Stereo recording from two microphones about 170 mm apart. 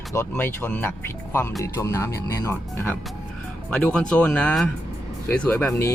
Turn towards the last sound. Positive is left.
turn(degrees=10)  # may be behind; listen again after turning